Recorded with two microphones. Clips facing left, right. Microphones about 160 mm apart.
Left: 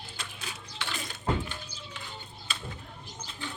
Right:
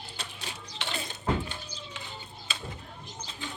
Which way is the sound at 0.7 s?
25° right (ahead or behind).